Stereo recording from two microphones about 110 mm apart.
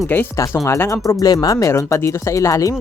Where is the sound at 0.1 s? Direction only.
20° left (ahead or behind).